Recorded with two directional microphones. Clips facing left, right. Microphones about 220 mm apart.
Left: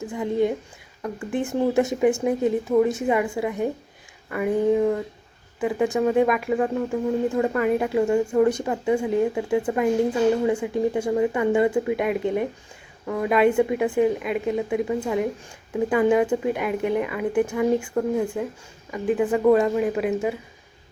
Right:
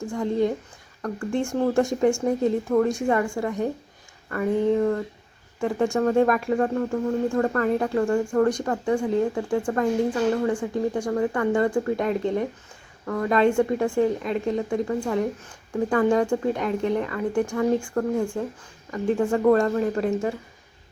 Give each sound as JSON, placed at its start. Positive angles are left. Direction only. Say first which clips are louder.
{"t": 0.1, "sound": "speech", "louder": "left 1 dB", "side_deg": 5}
{"t": 19.2, "sound": "speech", "louder": "left 1 dB", "side_deg": 15}